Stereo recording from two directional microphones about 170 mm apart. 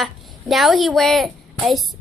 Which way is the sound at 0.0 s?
Centre (ahead or behind).